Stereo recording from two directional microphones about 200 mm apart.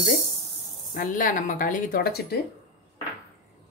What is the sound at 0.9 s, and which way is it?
Speech, 45° left (ahead or behind).